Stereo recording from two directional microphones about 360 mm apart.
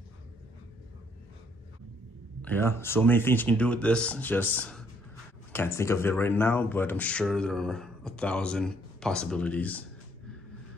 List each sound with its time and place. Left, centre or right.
2.4 s speech: centre